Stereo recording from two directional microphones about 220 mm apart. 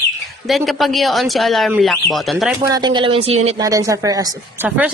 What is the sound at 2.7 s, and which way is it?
Speech, 20° right (ahead or behind).